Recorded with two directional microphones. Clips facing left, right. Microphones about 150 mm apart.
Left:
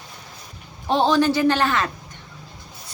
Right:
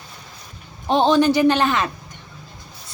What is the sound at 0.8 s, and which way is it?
A man's voice, 20° right (ahead or behind).